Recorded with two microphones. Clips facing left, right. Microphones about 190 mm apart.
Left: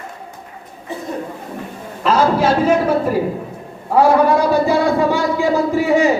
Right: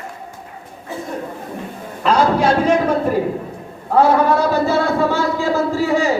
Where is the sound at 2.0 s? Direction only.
5° left (ahead or behind).